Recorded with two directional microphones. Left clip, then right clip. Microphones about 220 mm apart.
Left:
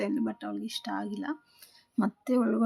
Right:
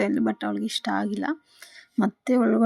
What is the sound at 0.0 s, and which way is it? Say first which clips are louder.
Speech: right 7 dB; 25° right (ahead or behind).